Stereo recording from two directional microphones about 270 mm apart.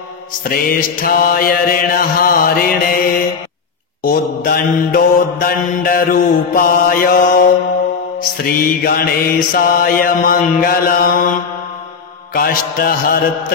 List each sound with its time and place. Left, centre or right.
0.4 s mantra: left
8.5 s mantra: left
12.4 s mantra: left